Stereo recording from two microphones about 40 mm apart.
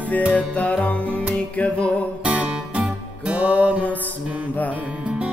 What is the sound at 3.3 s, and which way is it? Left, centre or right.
Music, right.